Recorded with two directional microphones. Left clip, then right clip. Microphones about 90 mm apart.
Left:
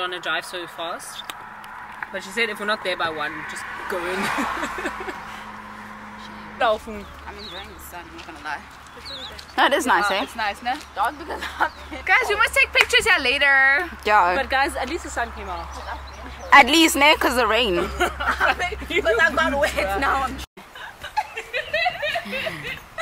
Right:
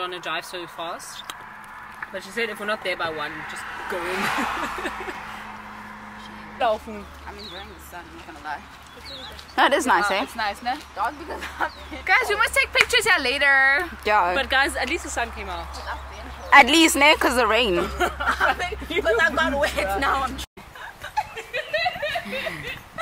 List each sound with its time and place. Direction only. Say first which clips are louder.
0.0 s speech: left 3 dB; 25° left (ahead or behind)
3.3 s speech: left 2 dB; 25° right (ahead or behind)
6.6 s speech: left 2 dB; 35° left (ahead or behind)
9.6 s speech: even; centre (ahead or behind)
11.0 s speech: left 3 dB; 30° left (ahead or behind)
12.0 s speech: left 1 dB; centre (ahead or behind)
14.3 s speech: even; 30° right (ahead or behind)
16.4 s speech: left 1 dB; centre (ahead or behind)
18.2 s a sound: even; 15° right (ahead or behind)
19.0 s speech: left 1 dB; 5° right (ahead or behind)
21.1 s chuckle: left 2 dB; centre (ahead or behind)